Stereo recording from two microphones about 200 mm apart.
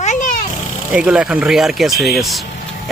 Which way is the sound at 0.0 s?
40° left (ahead or behind).